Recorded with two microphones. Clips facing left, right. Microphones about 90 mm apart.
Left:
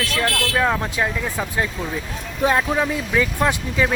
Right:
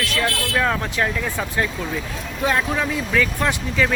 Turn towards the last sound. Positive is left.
turn(degrees=20)  # may be behind; listen again after turning